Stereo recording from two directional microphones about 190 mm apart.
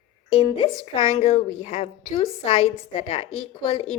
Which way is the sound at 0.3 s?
30° left (ahead or behind).